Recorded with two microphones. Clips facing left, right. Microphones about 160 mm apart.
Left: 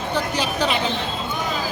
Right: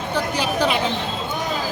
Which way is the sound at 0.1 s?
10° right (ahead or behind).